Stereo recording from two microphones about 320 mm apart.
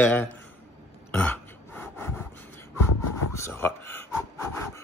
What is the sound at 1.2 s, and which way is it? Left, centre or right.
Gasp, centre.